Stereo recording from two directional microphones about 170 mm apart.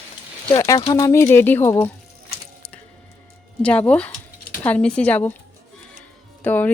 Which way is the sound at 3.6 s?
10° left (ahead or behind).